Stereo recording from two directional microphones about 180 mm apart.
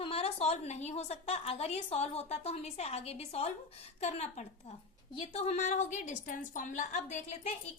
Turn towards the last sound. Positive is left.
turn(degrees=35)  # may be behind; listen again after turning